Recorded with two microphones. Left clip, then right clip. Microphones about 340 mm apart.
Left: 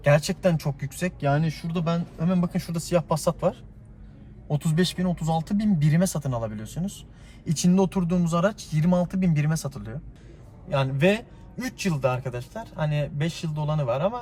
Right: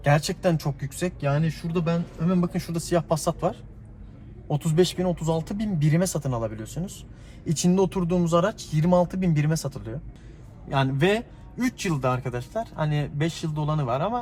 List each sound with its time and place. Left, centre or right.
0.0 s a man's voice: centre
1.3 s speech: centre
2.4 s a man's voice: centre